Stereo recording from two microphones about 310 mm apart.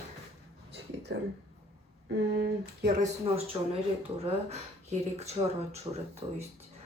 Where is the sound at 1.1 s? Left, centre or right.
Right.